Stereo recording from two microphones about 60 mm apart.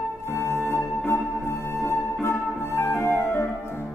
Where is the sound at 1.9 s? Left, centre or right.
Left.